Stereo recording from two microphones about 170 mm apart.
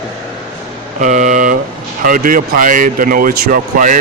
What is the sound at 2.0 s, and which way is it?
Speech, 55° right (ahead or behind).